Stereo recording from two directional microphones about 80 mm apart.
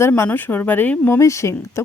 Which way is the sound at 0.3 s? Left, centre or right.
Left.